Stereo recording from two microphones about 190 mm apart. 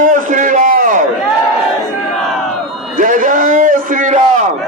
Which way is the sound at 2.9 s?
45° right (ahead or behind).